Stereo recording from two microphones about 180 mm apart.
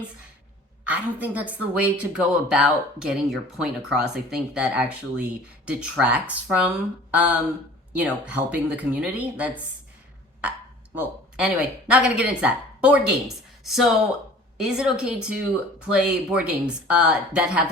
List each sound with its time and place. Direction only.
0.9 s speech: 10° right (ahead or behind)
7.1 s a sound: 10° right (ahead or behind)
7.9 s speech: 10° right (ahead or behind)
10.9 s speech: 10° right (ahead or behind)